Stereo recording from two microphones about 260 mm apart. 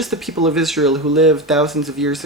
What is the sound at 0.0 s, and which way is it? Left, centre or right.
Speech, centre.